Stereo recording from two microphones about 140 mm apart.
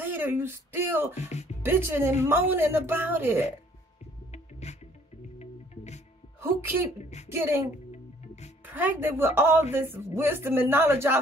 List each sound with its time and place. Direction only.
0.0 s a sound: 15° right (ahead or behind)
1.1 s speech: 55° left (ahead or behind)
1.6 s speech: 15° right (ahead or behind)
4.3 s music: 50° left (ahead or behind)
7.2 s speech: 15° right (ahead or behind)
8.6 s speech: 15° right (ahead or behind)